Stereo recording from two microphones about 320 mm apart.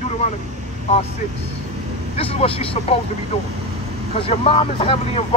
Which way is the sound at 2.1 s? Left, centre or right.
Centre.